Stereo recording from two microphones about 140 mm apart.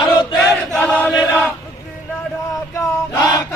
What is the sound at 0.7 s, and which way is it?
Speech, 5° left (ahead or behind).